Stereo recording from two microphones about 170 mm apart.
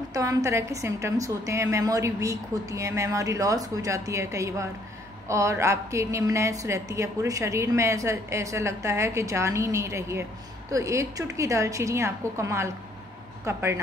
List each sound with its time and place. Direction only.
0.1 s a woman's voice: 20° right (ahead or behind)